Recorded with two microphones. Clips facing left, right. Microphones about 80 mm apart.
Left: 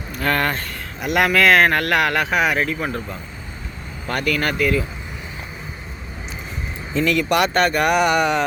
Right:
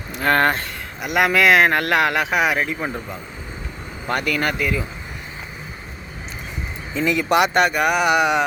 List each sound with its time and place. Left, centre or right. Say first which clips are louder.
0.2 s speech: right 3 dB; right
1.0 s speech: even; centre
7.0 s speech: right 1 dB; centre
7.7 s speech: left 1 dB; centre